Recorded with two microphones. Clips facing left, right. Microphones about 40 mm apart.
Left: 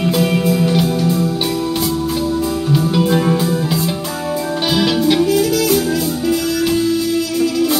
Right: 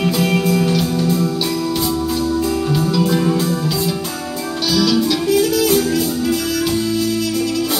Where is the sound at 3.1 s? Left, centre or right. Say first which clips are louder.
Left 2 dB; left.